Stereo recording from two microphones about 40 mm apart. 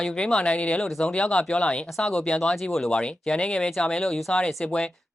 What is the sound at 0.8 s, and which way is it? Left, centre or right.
Speech, centre.